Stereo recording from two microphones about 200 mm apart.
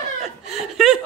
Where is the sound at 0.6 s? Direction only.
Centre (ahead or behind).